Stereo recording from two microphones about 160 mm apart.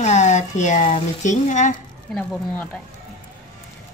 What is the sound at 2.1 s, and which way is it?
Speech, 5° left (ahead or behind).